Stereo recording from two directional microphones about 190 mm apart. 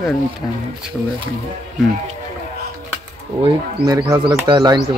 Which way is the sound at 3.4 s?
20° right (ahead or behind).